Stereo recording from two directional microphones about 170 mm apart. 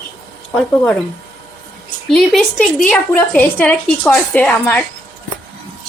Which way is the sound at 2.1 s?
Centre (ahead or behind).